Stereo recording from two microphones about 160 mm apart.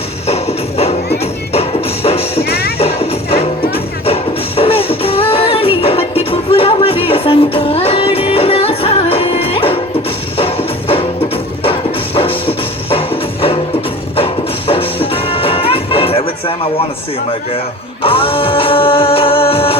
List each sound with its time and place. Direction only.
0.3 s music: 40° left (ahead or behind)
2.4 s music: 80° left
2.7 s music: 40° left (ahead or behind)
14.7 s music: 35° left (ahead or behind)
18.0 s music: 35° left (ahead or behind)